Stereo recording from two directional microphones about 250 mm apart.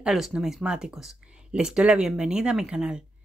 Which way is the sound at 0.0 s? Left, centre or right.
Centre.